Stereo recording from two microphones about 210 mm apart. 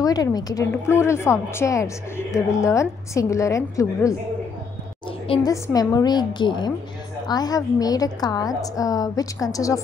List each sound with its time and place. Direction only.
0.0 s a woman's voice: 20° left (ahead or behind)
5.3 s a woman's voice: 15° left (ahead or behind)